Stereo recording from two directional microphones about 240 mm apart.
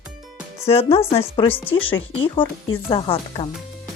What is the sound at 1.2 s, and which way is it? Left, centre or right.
Speech, left.